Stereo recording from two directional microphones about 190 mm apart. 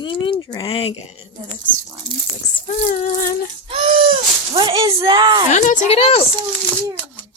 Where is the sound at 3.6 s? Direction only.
30° right (ahead or behind).